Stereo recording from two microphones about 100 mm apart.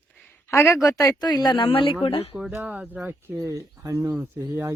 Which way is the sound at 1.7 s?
60° left (ahead or behind).